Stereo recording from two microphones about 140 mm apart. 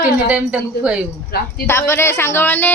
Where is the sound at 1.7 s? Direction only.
20° left (ahead or behind).